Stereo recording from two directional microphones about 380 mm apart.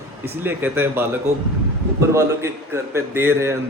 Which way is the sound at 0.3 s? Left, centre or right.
Centre.